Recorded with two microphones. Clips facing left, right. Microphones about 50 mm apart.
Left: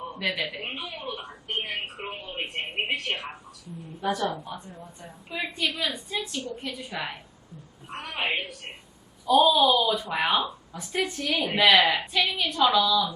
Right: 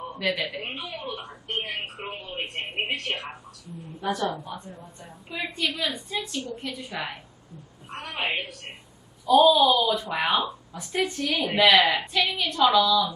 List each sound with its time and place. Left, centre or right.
0.2 s speech: centre
2.0 s a sound: centre
2.8 s a woman's voice: centre